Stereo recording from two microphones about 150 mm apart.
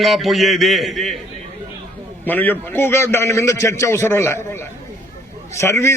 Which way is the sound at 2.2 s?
10° left (ahead or behind).